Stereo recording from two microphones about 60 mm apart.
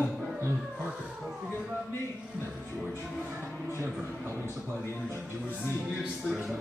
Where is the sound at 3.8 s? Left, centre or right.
Right.